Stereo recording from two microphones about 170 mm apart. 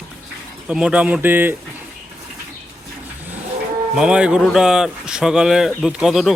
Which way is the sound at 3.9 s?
5° right (ahead or behind).